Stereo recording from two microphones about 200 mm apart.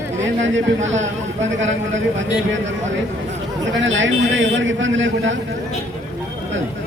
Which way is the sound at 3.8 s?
70° right (ahead or behind).